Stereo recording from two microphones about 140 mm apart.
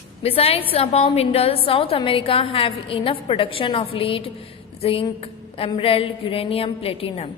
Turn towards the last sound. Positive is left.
turn(degrees=40)  # may be behind; listen again after turning